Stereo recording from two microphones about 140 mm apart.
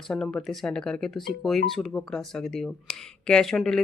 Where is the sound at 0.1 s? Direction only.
5° left (ahead or behind).